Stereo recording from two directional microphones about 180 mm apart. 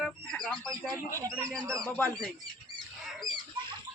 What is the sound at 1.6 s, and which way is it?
Speech, 15° right (ahead or behind).